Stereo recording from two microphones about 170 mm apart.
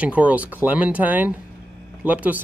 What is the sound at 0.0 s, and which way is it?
Speech, 10° right (ahead or behind).